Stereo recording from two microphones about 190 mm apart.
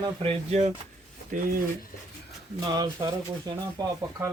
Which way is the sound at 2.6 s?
20° right (ahead or behind).